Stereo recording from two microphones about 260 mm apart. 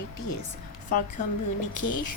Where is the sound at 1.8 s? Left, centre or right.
Left.